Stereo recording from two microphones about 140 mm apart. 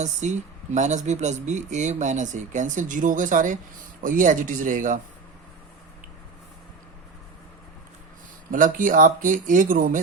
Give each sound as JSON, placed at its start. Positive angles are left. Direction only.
{"t": 0.0, "sound": "speech", "side_deg": -55}
{"t": 8.4, "sound": "speech", "side_deg": -80}